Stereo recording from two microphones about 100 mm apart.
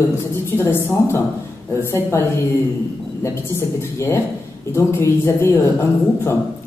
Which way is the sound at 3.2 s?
25° left (ahead or behind).